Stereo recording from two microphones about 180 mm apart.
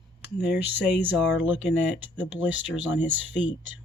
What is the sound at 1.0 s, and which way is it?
Speech, 10° right (ahead or behind).